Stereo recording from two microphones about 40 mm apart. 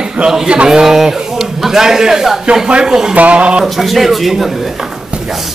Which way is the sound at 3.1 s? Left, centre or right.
Right.